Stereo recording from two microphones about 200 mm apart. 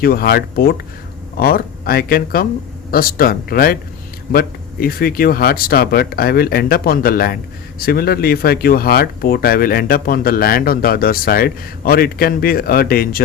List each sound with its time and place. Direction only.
0.0 s speech: 50° left (ahead or behind)